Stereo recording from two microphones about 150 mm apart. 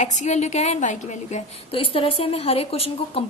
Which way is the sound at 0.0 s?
50° left (ahead or behind).